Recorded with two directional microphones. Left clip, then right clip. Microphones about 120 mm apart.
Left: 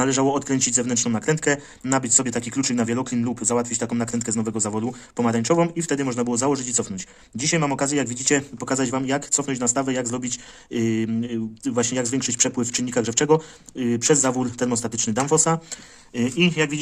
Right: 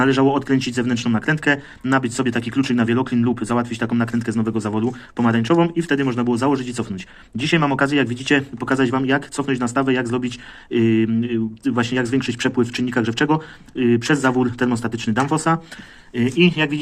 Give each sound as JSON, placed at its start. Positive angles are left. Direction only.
{"t": 0.0, "sound": "speech", "side_deg": 45}
{"t": 7.3, "sound": "speech", "side_deg": 30}